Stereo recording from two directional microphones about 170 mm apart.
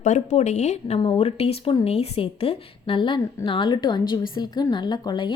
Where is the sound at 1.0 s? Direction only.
35° left (ahead or behind).